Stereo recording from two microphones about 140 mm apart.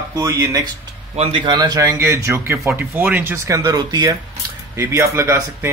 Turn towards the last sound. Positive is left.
turn(degrees=-20)  # may be behind; listen again after turning